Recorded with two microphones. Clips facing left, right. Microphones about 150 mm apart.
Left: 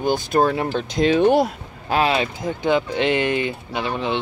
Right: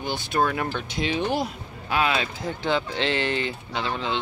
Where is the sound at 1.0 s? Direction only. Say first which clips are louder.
Left 10 dB; 55° left (ahead or behind).